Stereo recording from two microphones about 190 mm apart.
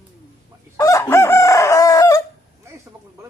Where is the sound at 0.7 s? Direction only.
15° left (ahead or behind).